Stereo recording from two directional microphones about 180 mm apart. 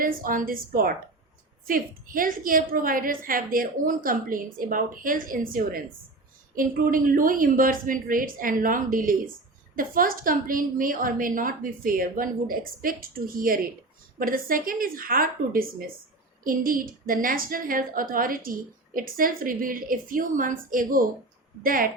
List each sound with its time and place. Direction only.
0.0 s a woman's voice: 50° right (ahead or behind)